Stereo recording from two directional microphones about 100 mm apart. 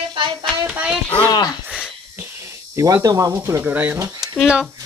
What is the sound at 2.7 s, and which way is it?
Speech, 35° right (ahead or behind).